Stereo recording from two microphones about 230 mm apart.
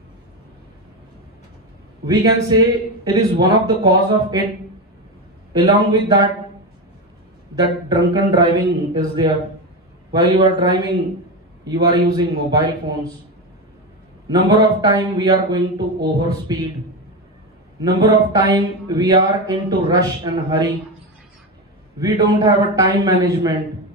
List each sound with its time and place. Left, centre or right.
2.0 s speech: centre
5.5 s speech: centre
7.5 s speech: centre
14.3 s speech: centre
17.7 s speech: centre
21.9 s speech: centre